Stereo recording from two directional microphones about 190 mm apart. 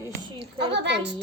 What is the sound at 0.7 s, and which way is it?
Speech, 65° right (ahead or behind).